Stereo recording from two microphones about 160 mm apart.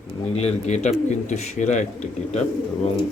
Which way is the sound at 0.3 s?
40° left (ahead or behind).